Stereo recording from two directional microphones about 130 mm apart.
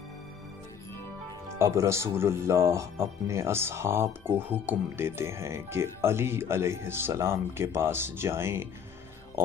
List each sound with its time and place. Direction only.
1.6 s speech: 20° right (ahead or behind)